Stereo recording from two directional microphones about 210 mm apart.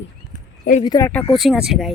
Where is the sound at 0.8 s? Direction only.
20° left (ahead or behind).